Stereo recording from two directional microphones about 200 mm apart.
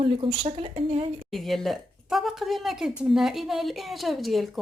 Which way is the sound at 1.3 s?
Centre (ahead or behind).